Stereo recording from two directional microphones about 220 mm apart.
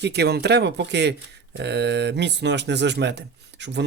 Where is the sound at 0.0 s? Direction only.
50° right (ahead or behind).